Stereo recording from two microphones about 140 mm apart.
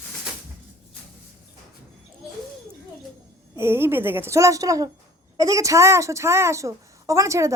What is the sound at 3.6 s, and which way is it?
A woman's voice, 15° right (ahead or behind).